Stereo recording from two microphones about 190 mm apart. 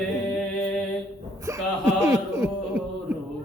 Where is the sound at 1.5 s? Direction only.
15° right (ahead or behind).